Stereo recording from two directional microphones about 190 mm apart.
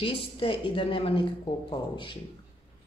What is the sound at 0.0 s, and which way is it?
A woman's voice, 30° left (ahead or behind).